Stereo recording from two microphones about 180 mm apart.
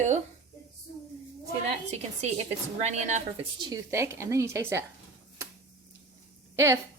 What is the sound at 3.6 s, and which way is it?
Speech, 20° right (ahead or behind).